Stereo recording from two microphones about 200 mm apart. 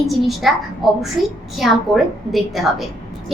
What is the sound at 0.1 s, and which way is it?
Speech, centre (ahead or behind).